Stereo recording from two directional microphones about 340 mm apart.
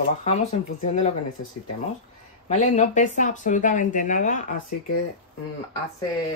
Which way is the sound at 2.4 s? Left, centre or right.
Left.